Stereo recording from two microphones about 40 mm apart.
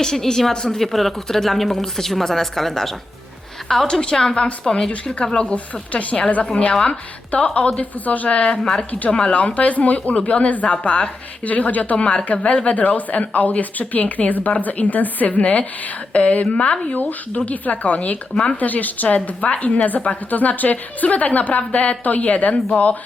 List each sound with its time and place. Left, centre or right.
0.0 s speech: centre
0.8 s speech: centre
5.2 s speech: left
5.9 s a woman's voice: left